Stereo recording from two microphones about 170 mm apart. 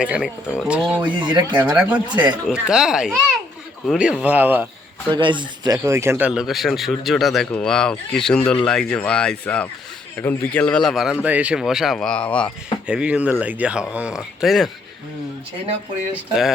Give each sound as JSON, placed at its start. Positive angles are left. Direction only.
{"t": 0.0, "sound": "speech", "side_deg": -5}
{"t": 1.2, "sound": "speech", "side_deg": -25}
{"t": 1.5, "sound": "speech", "side_deg": -10}
{"t": 5.1, "sound": "speech", "side_deg": -25}
{"t": 12.9, "sound": "speech", "side_deg": -5}